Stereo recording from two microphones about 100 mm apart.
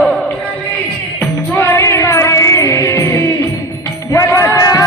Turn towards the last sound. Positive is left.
turn(degrees=35)  # may be behind; listen again after turning